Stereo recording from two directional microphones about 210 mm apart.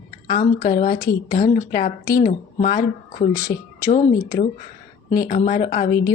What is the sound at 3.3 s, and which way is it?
Speech, 15° left (ahead or behind).